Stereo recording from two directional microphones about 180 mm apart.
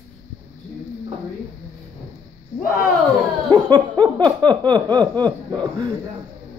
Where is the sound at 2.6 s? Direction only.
50° left (ahead or behind).